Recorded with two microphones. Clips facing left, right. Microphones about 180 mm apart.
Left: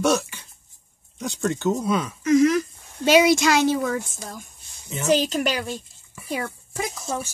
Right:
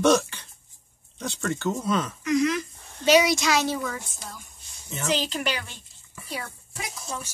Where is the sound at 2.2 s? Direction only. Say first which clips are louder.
Left 7 dB; 45° left (ahead or behind).